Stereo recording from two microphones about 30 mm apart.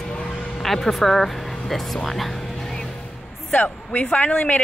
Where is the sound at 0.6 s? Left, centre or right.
Centre.